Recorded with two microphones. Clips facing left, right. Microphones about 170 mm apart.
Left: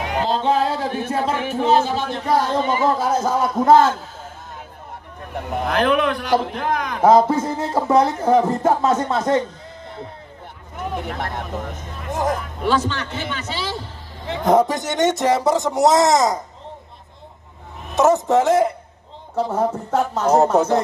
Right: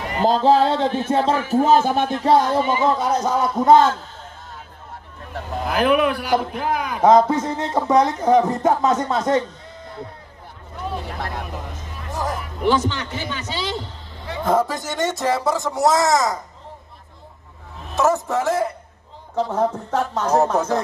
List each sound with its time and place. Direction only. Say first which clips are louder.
0.2 s music: right 4 dB; 40° right (ahead or behind)
1.5 s speech: right 2 dB; 45° right (ahead or behind)
2.5 s a man's voice: right 1 dB; 15° right (ahead or behind)
2.8 s a man's voice: even; centre (ahead or behind)
5.3 s speech: left 3 dB; 20° left (ahead or behind)
5.7 s a man's voice: right 1 dB; 5° right (ahead or behind)
7.0 s a man's voice: even; 5° left (ahead or behind)
10.8 s speech: left 2 dB; 20° left (ahead or behind)
12.6 s a man's voice: right 1 dB; 15° right (ahead or behind)
14.2 s speech: left 4 dB; 20° left (ahead or behind)
17.9 s speech: left 4 dB; 20° left (ahead or behind)
19.3 s a man's voice: even; 5° left (ahead or behind)